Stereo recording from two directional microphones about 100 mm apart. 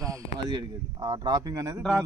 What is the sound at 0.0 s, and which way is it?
Speech, 35° right (ahead or behind).